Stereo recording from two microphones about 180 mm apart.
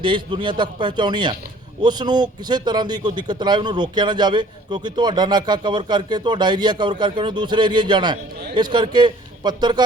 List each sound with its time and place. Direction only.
0.0 s a man's voice: 25° right (ahead or behind)